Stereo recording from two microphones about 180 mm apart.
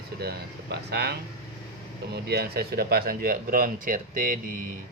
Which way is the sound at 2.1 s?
65° right (ahead or behind).